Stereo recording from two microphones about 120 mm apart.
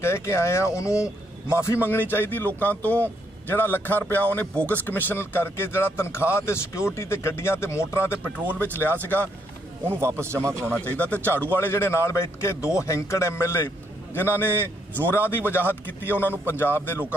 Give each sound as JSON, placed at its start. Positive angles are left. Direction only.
{"t": 0.0, "sound": "a man's voice", "side_deg": 20}
{"t": 9.8, "sound": "speech", "side_deg": -20}
{"t": 10.6, "sound": "a man's voice", "side_deg": 10}